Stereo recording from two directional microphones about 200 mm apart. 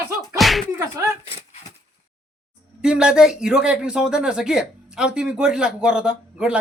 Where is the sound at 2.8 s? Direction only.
5° right (ahead or behind).